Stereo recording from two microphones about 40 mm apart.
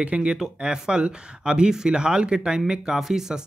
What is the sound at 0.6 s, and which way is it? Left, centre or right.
Speech, right.